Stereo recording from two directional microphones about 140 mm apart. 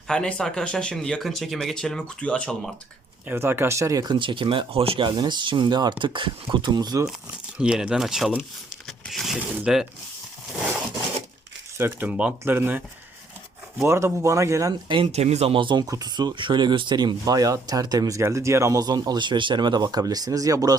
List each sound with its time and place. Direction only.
0.1 s speech: 5° left (ahead or behind)
3.2 s speech: 15° right (ahead or behind)
4.2 s speech: 35° right (ahead or behind)
7.6 s speech: 5° right (ahead or behind)
11.8 s speech: 15° right (ahead or behind)
13.8 s speech: 20° right (ahead or behind)
15.0 s speech: 50° right (ahead or behind); by 20.7 s 25° right (ahead or behind)